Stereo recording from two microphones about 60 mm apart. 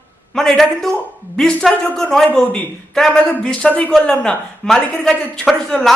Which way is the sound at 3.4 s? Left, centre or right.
Centre.